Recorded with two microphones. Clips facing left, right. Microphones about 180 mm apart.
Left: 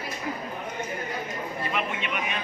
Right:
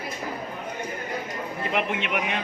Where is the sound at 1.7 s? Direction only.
70° right (ahead or behind).